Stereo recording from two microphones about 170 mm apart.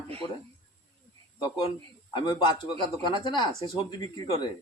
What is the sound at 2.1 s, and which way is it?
Speech, 25° left (ahead or behind).